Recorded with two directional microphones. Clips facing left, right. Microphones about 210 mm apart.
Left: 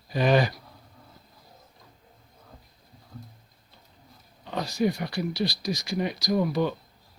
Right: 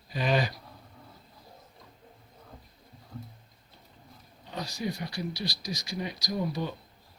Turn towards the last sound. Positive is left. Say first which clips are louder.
# left 7 dB
turn(degrees=70)  # may be behind; listen again after turning